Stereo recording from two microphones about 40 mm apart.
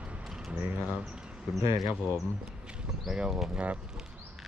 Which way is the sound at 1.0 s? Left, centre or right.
Right.